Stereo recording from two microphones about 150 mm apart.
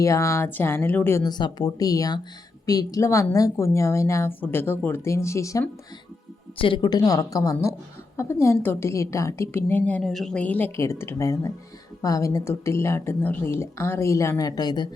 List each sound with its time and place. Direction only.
0.0 s a woman's voice: 20° left (ahead or behind)
1.2 s a woman's voice: 30° left (ahead or behind)
6.6 s a woman's voice: 35° left (ahead or behind)